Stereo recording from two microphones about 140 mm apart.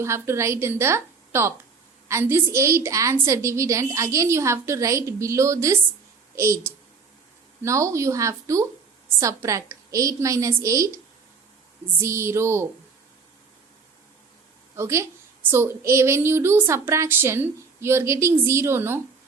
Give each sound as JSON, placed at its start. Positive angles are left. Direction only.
{"t": 0.0, "sound": "a woman's voice", "side_deg": -20}
{"t": 14.8, "sound": "a woman's voice", "side_deg": -20}